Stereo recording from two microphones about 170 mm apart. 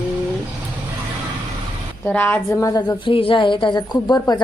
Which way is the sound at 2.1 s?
10° left (ahead or behind).